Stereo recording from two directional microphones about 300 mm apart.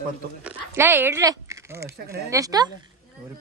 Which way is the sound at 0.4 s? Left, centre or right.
Centre.